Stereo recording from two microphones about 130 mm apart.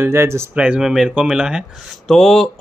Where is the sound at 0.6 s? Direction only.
5° right (ahead or behind).